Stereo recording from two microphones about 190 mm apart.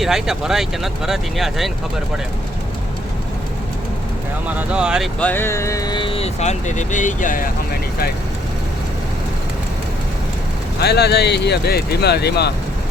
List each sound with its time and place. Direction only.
0.0 s speech: centre (ahead or behind)
4.4 s speech: 5° right (ahead or behind)
5.2 s speech: 10° left (ahead or behind); by 8.1 s 50° left (ahead or behind)
10.8 s speech: 60° left (ahead or behind)